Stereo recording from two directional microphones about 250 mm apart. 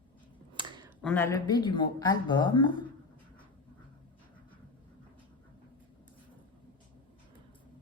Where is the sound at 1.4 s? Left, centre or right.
Centre.